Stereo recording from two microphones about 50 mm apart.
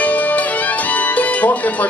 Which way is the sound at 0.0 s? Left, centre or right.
Left.